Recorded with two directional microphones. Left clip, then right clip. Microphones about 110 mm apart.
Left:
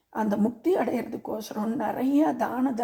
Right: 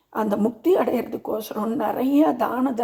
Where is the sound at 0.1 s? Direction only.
20° right (ahead or behind).